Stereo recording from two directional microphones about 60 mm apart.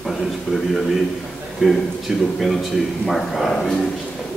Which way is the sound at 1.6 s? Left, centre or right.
Centre.